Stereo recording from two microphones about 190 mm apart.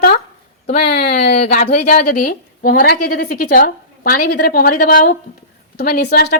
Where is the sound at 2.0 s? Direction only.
55° left (ahead or behind).